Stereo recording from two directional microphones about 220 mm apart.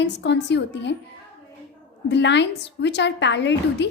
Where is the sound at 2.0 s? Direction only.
55° left (ahead or behind).